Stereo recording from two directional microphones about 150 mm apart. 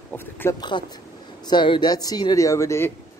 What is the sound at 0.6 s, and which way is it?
Speech, 30° left (ahead or behind).